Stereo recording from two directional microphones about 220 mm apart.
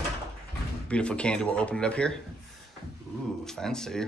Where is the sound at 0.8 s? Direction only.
5° left (ahead or behind).